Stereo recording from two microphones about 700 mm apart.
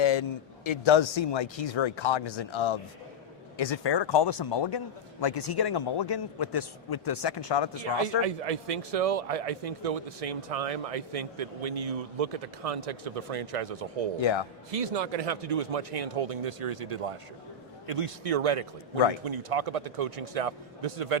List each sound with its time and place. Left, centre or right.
0.0 s speech: left
8.2 s a man's voice: right
14.2 s speech: left
14.7 s a man's voice: right